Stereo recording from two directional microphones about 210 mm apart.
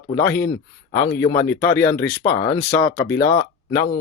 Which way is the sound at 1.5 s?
10° left (ahead or behind).